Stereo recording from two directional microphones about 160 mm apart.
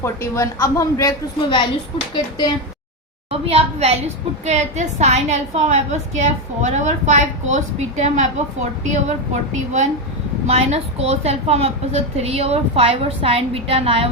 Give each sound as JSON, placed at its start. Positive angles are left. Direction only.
{"t": 0.0, "sound": "speech", "side_deg": 15}
{"t": 3.2, "sound": "a woman's voice", "side_deg": -35}